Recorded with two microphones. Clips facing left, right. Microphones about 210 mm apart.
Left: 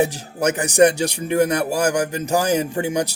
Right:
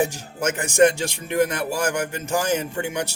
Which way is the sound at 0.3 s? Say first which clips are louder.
Left 3 dB; 40° left (ahead or behind).